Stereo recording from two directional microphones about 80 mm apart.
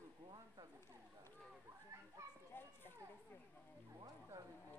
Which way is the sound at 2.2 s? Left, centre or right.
Right.